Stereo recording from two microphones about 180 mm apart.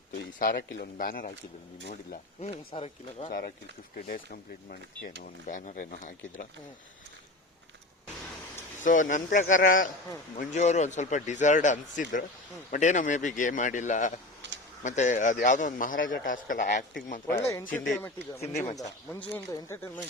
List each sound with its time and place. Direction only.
0.3 s speech: 55° left (ahead or behind)
2.4 s speech: 35° left (ahead or behind)
3.2 s speech: 50° left (ahead or behind)
8.8 s speech: 45° left (ahead or behind)
14.4 s a sound: 75° right (ahead or behind)
14.8 s speech: 40° left (ahead or behind)
17.4 s speech: 15° left (ahead or behind)
18.3 s speech: 35° left (ahead or behind)
19.3 s speech: 15° left (ahead or behind)